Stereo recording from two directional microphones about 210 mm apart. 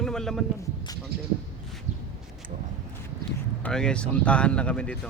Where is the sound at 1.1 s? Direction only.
50° right (ahead or behind).